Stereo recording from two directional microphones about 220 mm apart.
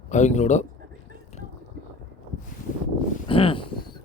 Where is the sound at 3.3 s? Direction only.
25° left (ahead or behind).